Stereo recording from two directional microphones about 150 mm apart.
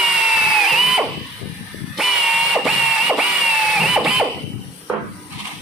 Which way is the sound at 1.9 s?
Centre (ahead or behind).